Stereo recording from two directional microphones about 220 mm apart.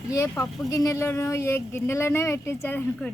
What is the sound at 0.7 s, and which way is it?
Speech, 15° left (ahead or behind).